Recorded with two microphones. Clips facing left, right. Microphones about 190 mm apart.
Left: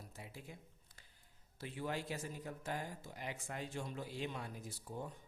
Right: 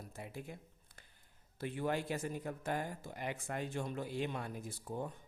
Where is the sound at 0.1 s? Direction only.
55° right (ahead or behind).